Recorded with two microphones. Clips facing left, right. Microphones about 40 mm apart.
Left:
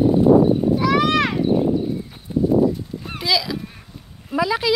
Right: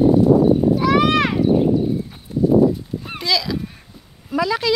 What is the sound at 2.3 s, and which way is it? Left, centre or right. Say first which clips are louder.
Horse: even; left.